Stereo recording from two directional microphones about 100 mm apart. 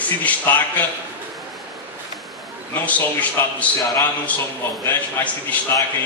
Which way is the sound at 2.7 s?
15° left (ahead or behind).